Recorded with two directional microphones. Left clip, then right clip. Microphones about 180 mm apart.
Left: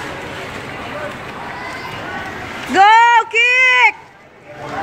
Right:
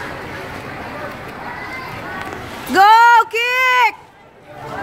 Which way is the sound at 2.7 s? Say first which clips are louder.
Even; 15° right (ahead or behind).